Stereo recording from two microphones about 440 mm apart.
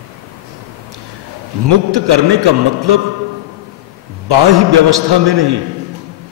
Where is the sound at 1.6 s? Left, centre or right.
Right.